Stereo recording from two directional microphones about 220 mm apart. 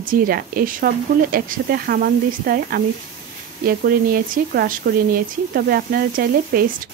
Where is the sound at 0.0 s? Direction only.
40° right (ahead or behind).